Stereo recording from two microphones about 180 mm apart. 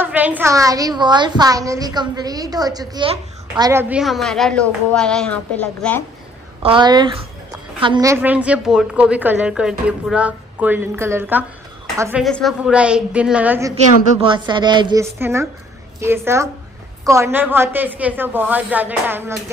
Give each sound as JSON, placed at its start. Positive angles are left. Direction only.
{"t": 0.0, "sound": "a woman's voice", "side_deg": -10}
{"t": 3.9, "sound": "a woman's voice", "side_deg": 0}
{"t": 6.6, "sound": "a woman's voice", "side_deg": -25}
{"t": 12.3, "sound": "a woman's voice", "side_deg": 0}
{"t": 14.2, "sound": "a woman's voice", "side_deg": -25}
{"t": 15.1, "sound": "a woman's voice", "side_deg": -15}